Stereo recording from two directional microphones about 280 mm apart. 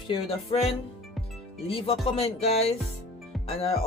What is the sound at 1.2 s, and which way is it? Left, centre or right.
Music, centre.